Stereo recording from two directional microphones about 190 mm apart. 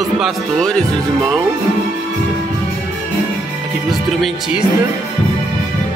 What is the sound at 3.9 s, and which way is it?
Speech, centre (ahead or behind).